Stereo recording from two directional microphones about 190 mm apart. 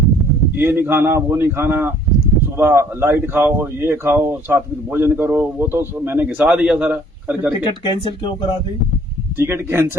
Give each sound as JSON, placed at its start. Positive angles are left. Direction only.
{"t": 0.6, "sound": "speech", "side_deg": -10}
{"t": 7.6, "sound": "speech", "side_deg": 25}
{"t": 9.4, "sound": "speech", "side_deg": -15}